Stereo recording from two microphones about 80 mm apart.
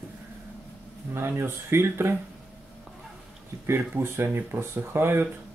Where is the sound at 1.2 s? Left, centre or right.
Right.